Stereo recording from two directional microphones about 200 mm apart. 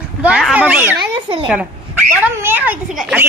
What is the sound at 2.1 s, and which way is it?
A child's voice, 10° right (ahead or behind).